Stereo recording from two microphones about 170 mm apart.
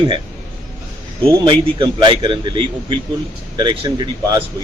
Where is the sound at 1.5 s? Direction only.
30° right (ahead or behind).